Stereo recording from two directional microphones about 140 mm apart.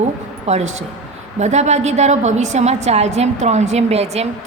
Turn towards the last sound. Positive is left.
turn(degrees=-50)  # may be behind; listen again after turning